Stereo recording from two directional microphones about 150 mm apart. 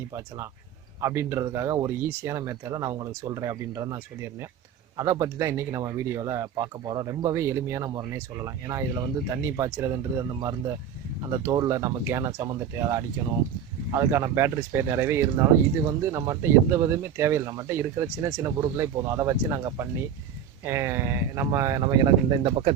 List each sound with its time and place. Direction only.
1.0 s speech: 15° right (ahead or behind)